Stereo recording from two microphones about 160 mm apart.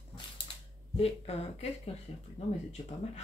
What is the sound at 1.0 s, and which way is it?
Speech, 40° left (ahead or behind).